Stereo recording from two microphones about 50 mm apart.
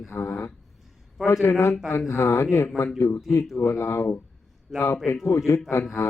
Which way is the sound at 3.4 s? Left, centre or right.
Centre.